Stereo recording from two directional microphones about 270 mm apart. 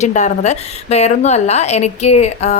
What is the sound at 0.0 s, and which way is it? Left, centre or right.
A woman's voice, left.